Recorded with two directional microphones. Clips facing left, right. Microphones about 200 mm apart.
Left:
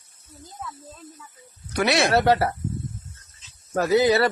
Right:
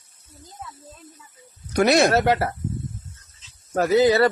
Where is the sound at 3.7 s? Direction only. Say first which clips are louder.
Right 2 dB; 45° right (ahead or behind).